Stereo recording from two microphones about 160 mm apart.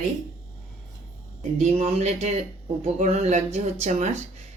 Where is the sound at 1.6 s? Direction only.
45° right (ahead or behind).